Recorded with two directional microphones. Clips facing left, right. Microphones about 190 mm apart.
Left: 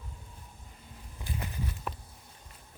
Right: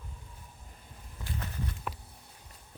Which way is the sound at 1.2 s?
15° left (ahead or behind).